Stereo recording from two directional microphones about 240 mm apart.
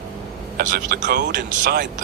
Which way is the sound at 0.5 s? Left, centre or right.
Right.